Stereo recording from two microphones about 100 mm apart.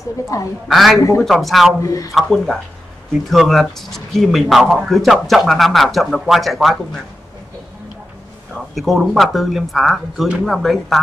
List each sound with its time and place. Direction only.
0.3 s speech: 35° left (ahead or behind)
0.7 s a man's voice: centre (ahead or behind)
1.8 s speech: 30° left (ahead or behind)
2.1 s a man's voice: 5° left (ahead or behind)
8.7 s a man's voice: centre (ahead or behind)